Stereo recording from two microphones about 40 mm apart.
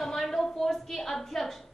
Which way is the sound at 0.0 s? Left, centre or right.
Centre.